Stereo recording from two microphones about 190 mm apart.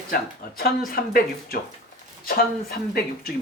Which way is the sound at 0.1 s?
50° left (ahead or behind).